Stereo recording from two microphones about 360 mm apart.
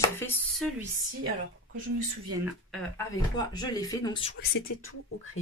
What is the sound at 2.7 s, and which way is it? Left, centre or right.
Speech, centre.